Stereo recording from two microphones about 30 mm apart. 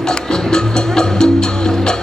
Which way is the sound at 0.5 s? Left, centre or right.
Left.